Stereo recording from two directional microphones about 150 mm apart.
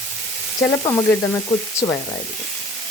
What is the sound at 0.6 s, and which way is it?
Frying, 20° left (ahead or behind).